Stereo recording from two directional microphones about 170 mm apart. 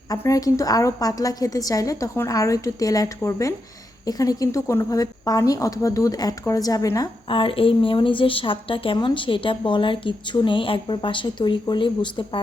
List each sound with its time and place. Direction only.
0.1 s speech: 20° left (ahead or behind)
7.3 s speech: 30° left (ahead or behind)